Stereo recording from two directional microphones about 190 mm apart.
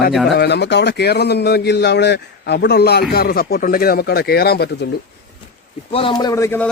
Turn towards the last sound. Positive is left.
turn(degrees=15)  # may be behind; listen again after turning